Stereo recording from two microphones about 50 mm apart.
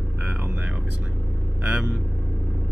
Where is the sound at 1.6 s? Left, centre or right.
Right.